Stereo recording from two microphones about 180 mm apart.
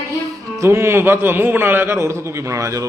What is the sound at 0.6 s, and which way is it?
A man's voice, 15° right (ahead or behind).